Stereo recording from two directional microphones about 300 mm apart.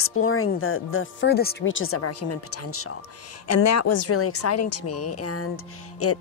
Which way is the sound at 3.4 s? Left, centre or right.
Left.